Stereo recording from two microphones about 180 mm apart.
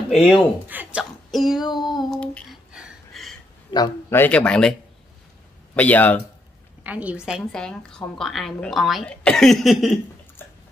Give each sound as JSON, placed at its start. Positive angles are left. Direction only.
{"t": 0.1, "sound": "a woman's voice", "side_deg": 0}
{"t": 2.7, "sound": "a sound", "side_deg": 0}
{"t": 3.7, "sound": "a man's voice", "side_deg": 20}
{"t": 4.2, "sound": "a woman's voice", "side_deg": 5}
{"t": 5.8, "sound": "speech", "side_deg": 10}
{"t": 6.8, "sound": "a woman's voice", "side_deg": -10}
{"t": 10.4, "sound": "water", "side_deg": 10}